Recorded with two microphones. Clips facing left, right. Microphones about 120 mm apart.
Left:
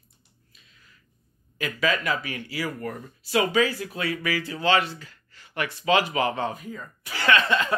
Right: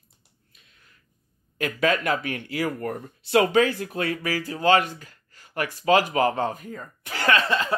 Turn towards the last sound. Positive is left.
turn(degrees=-30)  # may be behind; listen again after turning